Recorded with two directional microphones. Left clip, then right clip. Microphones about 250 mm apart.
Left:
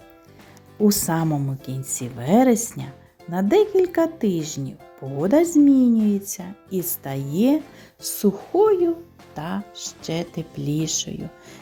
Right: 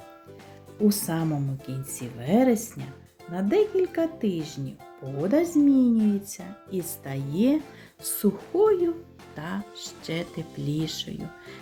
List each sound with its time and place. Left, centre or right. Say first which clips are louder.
0.9 s speech: left 5 dB; left